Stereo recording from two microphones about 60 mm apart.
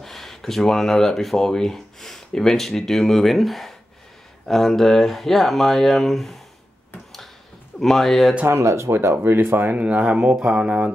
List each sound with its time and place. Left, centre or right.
0.0 s speech: centre
7.8 s speech: centre
8.5 s speech: right
9.8 s speech: right